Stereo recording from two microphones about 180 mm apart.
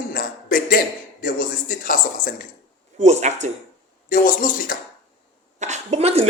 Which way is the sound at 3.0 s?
40° right (ahead or behind).